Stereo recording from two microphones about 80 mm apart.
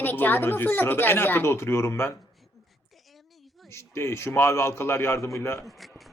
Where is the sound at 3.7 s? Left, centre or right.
Left.